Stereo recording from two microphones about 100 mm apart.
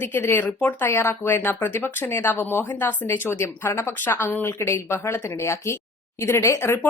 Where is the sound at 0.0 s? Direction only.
20° left (ahead or behind).